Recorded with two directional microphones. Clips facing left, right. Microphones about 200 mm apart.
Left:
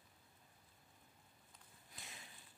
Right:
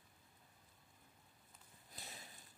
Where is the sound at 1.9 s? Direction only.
40° right (ahead or behind).